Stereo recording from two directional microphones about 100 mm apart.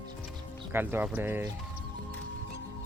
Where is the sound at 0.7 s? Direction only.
20° right (ahead or behind).